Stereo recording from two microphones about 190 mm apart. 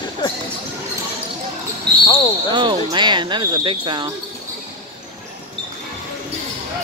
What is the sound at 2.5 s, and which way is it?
Speech, 25° right (ahead or behind).